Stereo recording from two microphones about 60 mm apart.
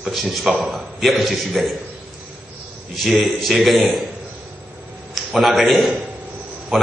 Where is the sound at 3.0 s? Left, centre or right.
Centre.